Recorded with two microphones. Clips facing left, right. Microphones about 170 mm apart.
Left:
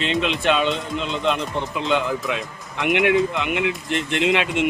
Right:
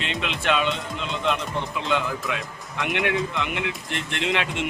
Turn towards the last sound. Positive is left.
turn(degrees=20)  # may be behind; listen again after turning